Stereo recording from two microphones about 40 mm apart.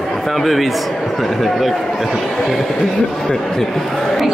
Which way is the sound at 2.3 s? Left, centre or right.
Centre.